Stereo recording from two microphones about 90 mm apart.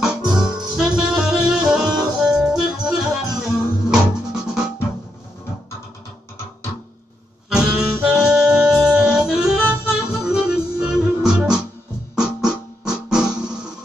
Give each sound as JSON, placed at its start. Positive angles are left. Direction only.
{"t": 0.1, "sound": "music", "side_deg": -50}
{"t": 0.7, "sound": "music", "side_deg": -10}
{"t": 7.4, "sound": "saxophone", "side_deg": -10}
{"t": 9.7, "sound": "music", "side_deg": -10}